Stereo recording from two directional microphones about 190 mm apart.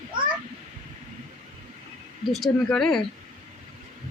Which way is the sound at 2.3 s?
Centre (ahead or behind).